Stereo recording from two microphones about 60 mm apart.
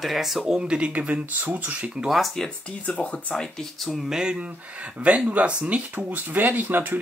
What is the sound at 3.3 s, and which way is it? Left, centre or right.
Speech, centre.